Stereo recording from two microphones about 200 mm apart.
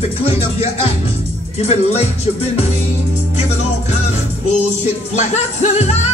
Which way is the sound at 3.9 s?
35° left (ahead or behind).